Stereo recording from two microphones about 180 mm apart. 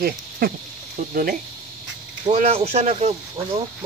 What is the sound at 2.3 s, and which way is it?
Speech, 40° right (ahead or behind).